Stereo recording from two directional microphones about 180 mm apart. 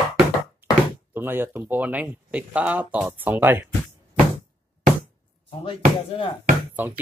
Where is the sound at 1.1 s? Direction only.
10° right (ahead or behind).